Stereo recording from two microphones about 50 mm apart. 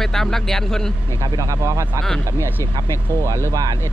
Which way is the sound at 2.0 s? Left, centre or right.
Right.